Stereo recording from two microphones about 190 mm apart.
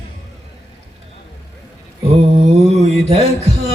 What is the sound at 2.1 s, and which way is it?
Mantra, 30° right (ahead or behind).